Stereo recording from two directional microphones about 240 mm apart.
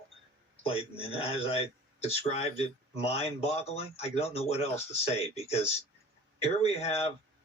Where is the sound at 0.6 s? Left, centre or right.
Left.